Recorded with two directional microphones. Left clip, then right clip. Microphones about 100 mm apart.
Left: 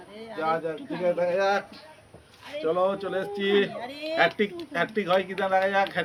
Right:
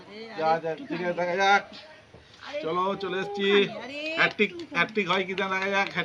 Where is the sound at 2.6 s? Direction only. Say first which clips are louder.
Left 3 dB; 25° right (ahead or behind).